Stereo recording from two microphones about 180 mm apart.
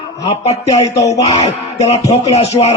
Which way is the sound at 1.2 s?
40° left (ahead or behind).